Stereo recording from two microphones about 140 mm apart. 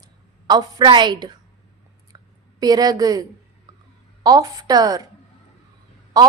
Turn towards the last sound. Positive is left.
turn(degrees=-25)  # may be behind; listen again after turning